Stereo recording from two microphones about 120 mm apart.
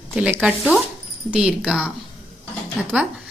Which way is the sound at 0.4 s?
5° right (ahead or behind).